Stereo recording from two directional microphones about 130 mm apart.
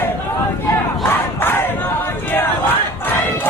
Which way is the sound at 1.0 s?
15° left (ahead or behind).